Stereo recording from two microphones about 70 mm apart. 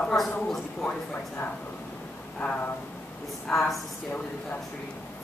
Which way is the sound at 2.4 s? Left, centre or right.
Left.